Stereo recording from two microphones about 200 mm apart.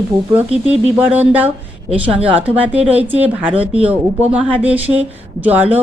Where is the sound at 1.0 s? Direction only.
10° right (ahead or behind).